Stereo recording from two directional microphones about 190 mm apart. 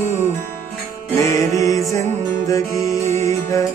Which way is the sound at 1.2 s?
15° left (ahead or behind).